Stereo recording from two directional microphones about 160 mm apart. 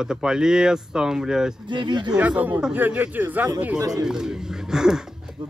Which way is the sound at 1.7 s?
30° right (ahead or behind).